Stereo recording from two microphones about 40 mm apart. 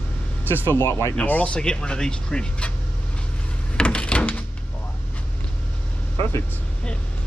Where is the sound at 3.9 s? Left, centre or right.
Left.